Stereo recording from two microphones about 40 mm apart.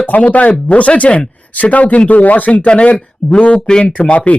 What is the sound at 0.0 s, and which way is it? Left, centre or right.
Speech, left.